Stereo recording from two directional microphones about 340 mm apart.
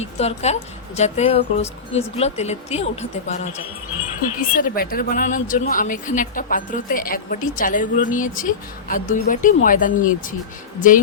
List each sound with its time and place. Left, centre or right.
0.0 s speech: centre
4.5 s speech: left